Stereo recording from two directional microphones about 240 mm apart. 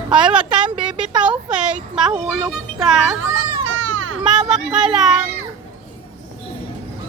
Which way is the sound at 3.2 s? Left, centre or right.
Right.